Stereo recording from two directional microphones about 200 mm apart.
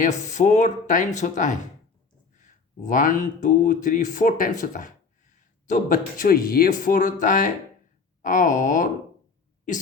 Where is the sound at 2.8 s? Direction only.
40° left (ahead or behind).